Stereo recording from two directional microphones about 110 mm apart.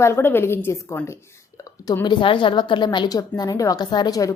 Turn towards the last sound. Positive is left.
turn(degrees=30)  # may be behind; listen again after turning